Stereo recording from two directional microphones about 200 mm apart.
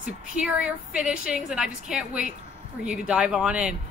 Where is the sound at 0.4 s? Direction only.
5° right (ahead or behind).